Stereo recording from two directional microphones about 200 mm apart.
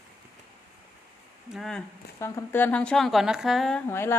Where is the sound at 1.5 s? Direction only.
Centre (ahead or behind).